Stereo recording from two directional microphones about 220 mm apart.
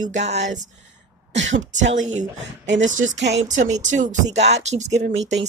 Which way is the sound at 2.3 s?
55° right (ahead or behind).